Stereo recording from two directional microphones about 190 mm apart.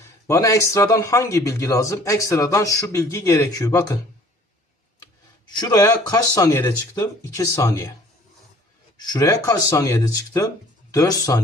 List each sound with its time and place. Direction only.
0.3 s speech: 15° left (ahead or behind)
5.5 s speech: 20° left (ahead or behind)
9.0 s speech: 20° left (ahead or behind)